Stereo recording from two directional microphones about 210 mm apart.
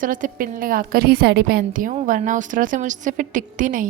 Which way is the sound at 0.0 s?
40° right (ahead or behind).